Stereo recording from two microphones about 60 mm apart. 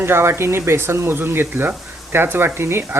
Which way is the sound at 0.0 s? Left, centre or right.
Right.